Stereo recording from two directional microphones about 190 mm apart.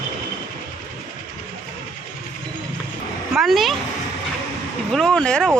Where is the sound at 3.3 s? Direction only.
Centre (ahead or behind).